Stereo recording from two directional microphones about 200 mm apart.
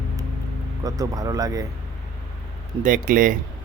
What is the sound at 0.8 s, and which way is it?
Speech, 20° right (ahead or behind).